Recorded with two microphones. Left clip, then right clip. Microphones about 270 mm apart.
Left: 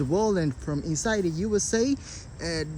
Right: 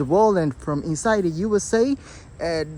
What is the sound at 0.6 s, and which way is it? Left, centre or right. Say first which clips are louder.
Speech: right 6 dB; right.